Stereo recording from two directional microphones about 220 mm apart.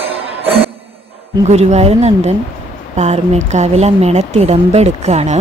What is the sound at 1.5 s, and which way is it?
Speech, 30° right (ahead or behind).